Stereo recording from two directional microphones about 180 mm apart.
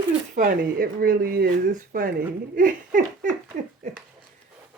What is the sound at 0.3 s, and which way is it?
Speech, 50° right (ahead or behind).